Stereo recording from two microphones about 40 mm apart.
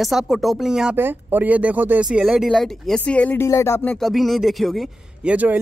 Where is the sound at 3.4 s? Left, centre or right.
Left.